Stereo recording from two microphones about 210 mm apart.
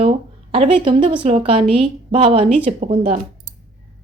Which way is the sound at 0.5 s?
25° right (ahead or behind).